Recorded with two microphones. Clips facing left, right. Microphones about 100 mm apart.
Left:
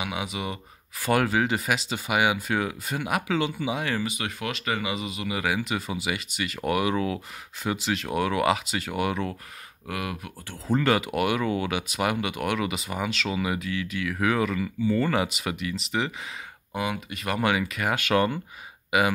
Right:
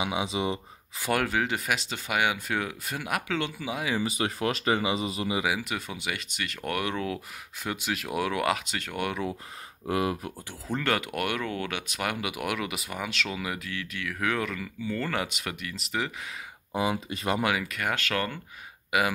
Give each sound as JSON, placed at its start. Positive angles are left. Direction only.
{"t": 0.0, "sound": "speech", "side_deg": -25}
{"t": 1.1, "sound": "speech", "side_deg": 5}
{"t": 4.0, "sound": "speech", "side_deg": -35}
{"t": 5.4, "sound": "speech", "side_deg": -5}
{"t": 9.8, "sound": "speech", "side_deg": -30}
{"t": 10.7, "sound": "speech", "side_deg": 5}
{"t": 16.7, "sound": "speech", "side_deg": -30}
{"t": 17.4, "sound": "speech", "side_deg": 0}
{"t": 18.0, "sound": "speech", "side_deg": 20}